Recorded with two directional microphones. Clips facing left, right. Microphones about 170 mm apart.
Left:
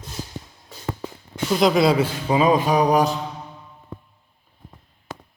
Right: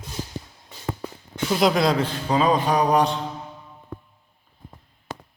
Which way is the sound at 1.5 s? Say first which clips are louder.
Left 2 dB; centre (ahead or behind).